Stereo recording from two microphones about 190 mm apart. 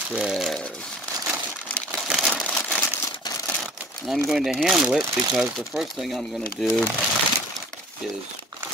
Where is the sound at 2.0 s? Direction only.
5° right (ahead or behind).